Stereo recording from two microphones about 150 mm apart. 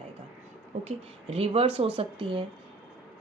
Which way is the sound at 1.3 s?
40° right (ahead or behind).